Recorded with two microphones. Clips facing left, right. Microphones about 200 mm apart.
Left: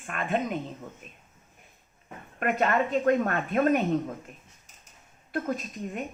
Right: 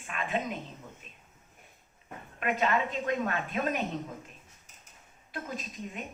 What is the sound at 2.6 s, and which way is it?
Speech, 50° left (ahead or behind).